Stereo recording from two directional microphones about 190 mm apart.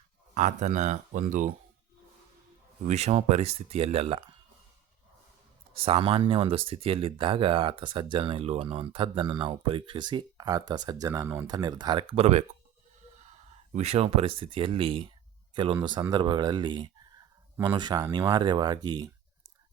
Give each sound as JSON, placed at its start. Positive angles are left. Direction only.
{"t": 0.3, "sound": "speech", "side_deg": -40}
{"t": 2.8, "sound": "speech", "side_deg": -35}
{"t": 5.7, "sound": "speech", "side_deg": -30}
{"t": 13.7, "sound": "speech", "side_deg": -35}